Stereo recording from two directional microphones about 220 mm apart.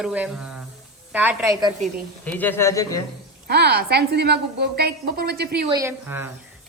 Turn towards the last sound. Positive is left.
turn(degrees=-10)  # may be behind; listen again after turning